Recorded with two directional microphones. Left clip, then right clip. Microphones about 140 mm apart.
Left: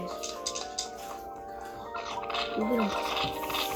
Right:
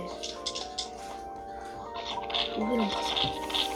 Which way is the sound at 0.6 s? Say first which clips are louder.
Even; 20° right (ahead or behind).